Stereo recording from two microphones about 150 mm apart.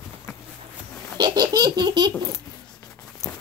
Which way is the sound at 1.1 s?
25° right (ahead or behind).